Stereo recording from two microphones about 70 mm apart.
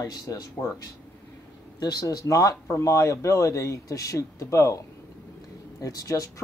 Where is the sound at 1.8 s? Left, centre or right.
Left.